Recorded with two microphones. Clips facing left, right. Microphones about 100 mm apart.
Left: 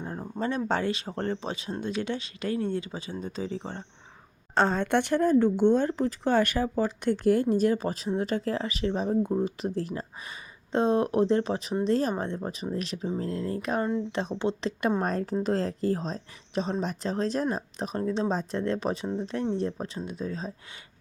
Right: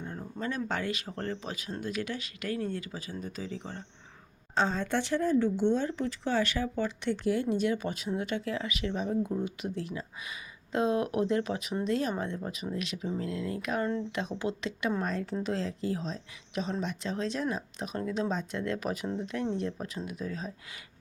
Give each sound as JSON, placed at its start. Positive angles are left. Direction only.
{"t": 0.0, "sound": "speech", "side_deg": 35}
{"t": 4.5, "sound": "a woman's voice", "side_deg": 60}
{"t": 14.7, "sound": "a woman's voice", "side_deg": 45}